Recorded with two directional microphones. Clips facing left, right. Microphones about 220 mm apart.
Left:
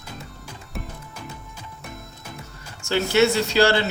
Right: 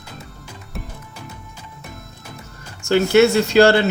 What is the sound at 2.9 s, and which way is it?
Speech, 50° right (ahead or behind).